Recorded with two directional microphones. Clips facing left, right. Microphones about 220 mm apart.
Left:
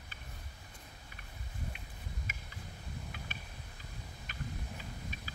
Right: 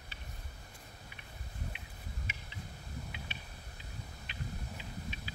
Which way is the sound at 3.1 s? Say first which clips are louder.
Even; 45° left (ahead or behind).